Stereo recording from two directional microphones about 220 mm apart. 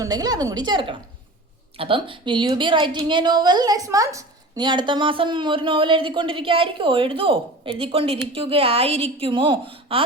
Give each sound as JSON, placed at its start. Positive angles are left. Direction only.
{"t": 0.0, "sound": "a woman's voice", "side_deg": -15}